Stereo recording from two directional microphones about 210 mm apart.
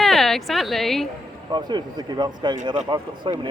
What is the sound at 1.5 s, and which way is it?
Speech, 20° right (ahead or behind).